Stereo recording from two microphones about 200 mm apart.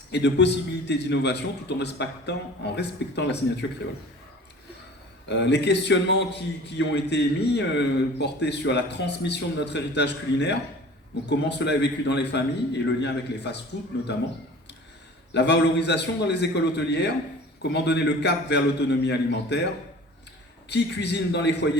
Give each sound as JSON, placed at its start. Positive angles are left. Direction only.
{"t": 0.1, "sound": "a man's voice", "side_deg": 60}
{"t": 5.3, "sound": "a man's voice", "side_deg": 60}
{"t": 15.3, "sound": "a man's voice", "side_deg": 60}
{"t": 20.7, "sound": "a man's voice", "side_deg": 60}